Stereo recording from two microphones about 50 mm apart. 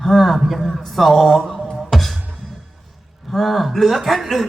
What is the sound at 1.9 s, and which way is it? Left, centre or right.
Music, centre.